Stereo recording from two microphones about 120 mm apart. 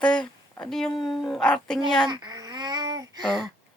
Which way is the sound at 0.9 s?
40° left (ahead or behind).